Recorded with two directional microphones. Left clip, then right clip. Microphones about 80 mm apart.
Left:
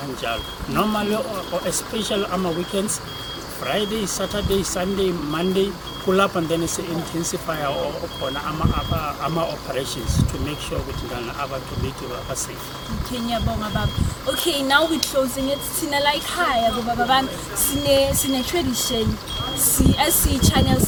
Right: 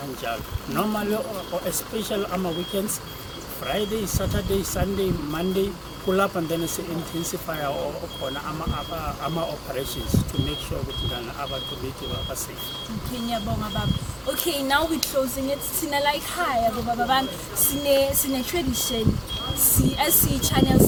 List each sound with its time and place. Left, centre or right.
0.3 s a woman's voice: centre
3.7 s a woman's voice: centre
14.3 s a woman's voice: centre
20.0 s speech: centre